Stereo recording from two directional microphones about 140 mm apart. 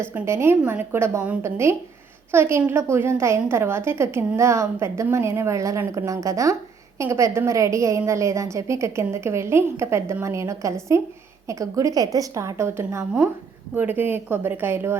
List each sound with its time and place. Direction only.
0.1 s a woman's voice: 15° right (ahead or behind)